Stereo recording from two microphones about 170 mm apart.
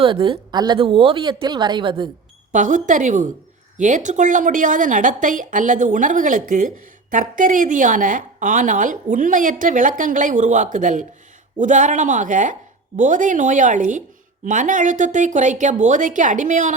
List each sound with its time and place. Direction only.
0.0 s a woman's voice: 30° right (ahead or behind)
2.5 s a woman's voice: 50° right (ahead or behind)